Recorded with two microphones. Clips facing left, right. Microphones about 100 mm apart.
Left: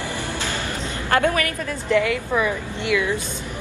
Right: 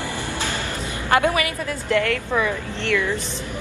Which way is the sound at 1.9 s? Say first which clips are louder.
Left 2 dB; 5° left (ahead or behind).